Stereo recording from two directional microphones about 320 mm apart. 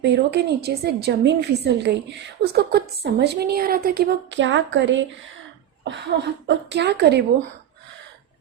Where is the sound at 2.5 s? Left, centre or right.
Right.